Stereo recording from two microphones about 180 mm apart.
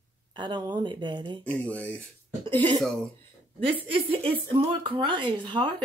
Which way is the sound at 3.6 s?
30° right (ahead or behind).